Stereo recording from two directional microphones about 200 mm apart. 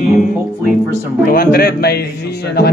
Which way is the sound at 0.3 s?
Centre (ahead or behind).